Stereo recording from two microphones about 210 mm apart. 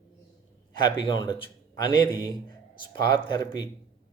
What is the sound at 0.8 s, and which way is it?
Speech, 25° left (ahead or behind).